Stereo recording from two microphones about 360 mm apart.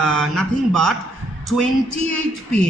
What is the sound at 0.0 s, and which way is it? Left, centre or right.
Speech, centre.